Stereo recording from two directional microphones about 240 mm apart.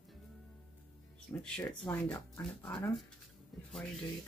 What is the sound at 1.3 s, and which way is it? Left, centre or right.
Speech, centre.